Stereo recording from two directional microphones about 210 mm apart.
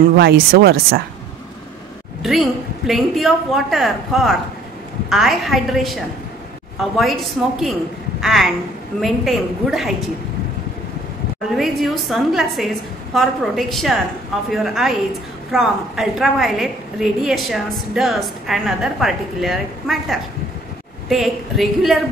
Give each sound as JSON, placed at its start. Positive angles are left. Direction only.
{"t": 0.2, "sound": "speech", "side_deg": -45}
{"t": 2.2, "sound": "a woman's voice", "side_deg": 0}
{"t": 8.2, "sound": "a woman's voice", "side_deg": 0}
{"t": 11.5, "sound": "a woman's voice", "side_deg": 0}